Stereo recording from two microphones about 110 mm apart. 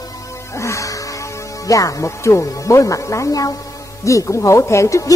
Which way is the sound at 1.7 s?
30° left (ahead or behind).